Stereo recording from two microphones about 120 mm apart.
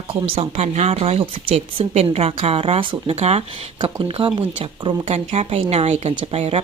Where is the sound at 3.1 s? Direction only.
60° right (ahead or behind).